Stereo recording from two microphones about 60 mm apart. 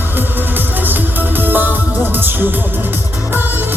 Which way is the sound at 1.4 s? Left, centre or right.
Right.